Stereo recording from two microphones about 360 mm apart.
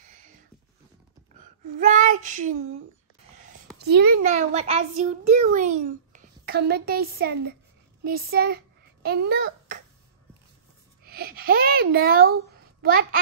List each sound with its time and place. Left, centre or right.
1.8 s child singing: right
3.7 s a child's voice: right
11.1 s a child's voice: right